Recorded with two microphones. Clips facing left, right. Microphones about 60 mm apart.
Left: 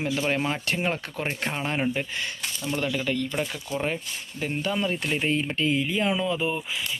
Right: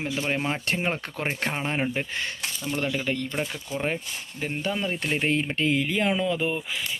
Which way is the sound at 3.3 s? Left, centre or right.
Centre.